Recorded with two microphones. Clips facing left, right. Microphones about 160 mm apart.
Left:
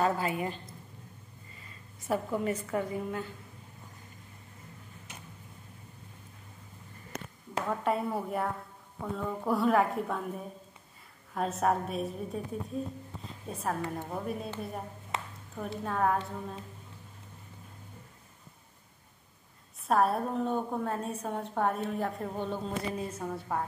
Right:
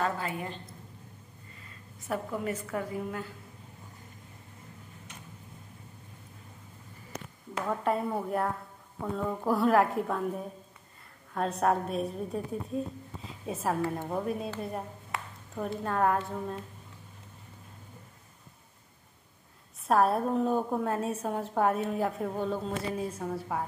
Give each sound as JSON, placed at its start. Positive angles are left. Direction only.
{"t": 0.0, "sound": "a woman's voice", "side_deg": 10}
{"t": 2.0, "sound": "a woman's voice", "side_deg": 0}
{"t": 7.6, "sound": "a woman's voice", "side_deg": 0}
{"t": 15.1, "sound": "a sound", "side_deg": 20}
{"t": 15.5, "sound": "a woman's voice", "side_deg": 0}
{"t": 19.9, "sound": "a woman's voice", "side_deg": 0}